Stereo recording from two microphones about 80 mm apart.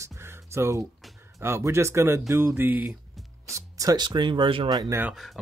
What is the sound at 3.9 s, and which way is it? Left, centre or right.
Speech, right.